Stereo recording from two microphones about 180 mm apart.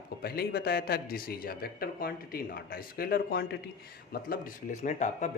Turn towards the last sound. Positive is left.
turn(degrees=40)  # may be behind; listen again after turning